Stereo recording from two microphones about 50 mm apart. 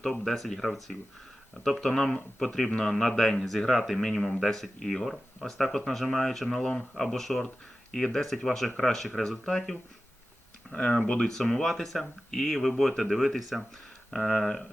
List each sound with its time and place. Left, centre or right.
0.0 s speech: centre
9.4 s speech: centre
11.3 s speech: centre